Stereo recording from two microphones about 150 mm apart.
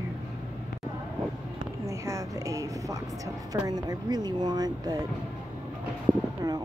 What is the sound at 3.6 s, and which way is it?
A woman's voice, 25° right (ahead or behind).